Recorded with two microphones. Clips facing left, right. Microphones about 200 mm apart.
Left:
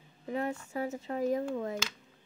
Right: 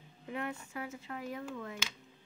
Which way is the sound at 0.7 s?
40° left (ahead or behind).